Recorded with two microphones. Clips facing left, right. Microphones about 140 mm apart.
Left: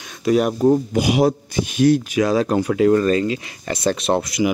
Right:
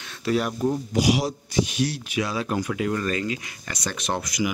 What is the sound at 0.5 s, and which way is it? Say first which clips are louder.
Speech: left 8 dB; 50° left (ahead or behind).